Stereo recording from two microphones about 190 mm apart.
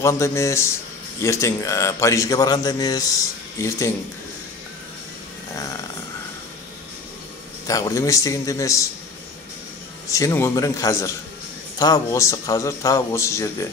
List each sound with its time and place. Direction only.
0.0 s a man's voice: 15° left (ahead or behind)
5.5 s a sound: 15° left (ahead or behind)
7.6 s a man's voice: 20° left (ahead or behind)
10.1 s a man's voice: 15° left (ahead or behind)